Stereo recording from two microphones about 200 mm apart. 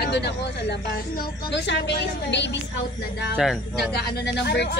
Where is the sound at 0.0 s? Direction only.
55° left (ahead or behind).